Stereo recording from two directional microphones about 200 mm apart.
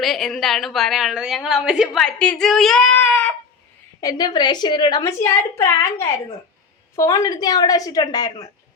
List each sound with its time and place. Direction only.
0.0 s a woman's voice: centre (ahead or behind)
4.0 s a woman's voice: 20° left (ahead or behind)